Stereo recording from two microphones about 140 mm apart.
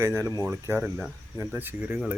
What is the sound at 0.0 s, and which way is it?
Speech, 20° right (ahead or behind).